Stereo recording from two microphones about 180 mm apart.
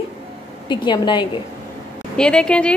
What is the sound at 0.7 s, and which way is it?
Speech, 25° left (ahead or behind).